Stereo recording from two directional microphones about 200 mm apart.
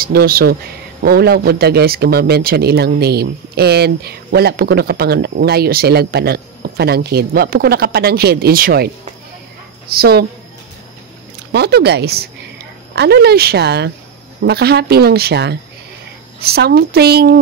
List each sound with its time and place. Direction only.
0.0 s speech: 50° right (ahead or behind)
9.9 s speech: 50° right (ahead or behind)
11.5 s a woman's voice: 55° right (ahead or behind)